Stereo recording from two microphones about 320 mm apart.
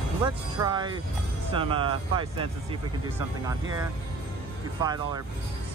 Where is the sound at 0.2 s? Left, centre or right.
Centre.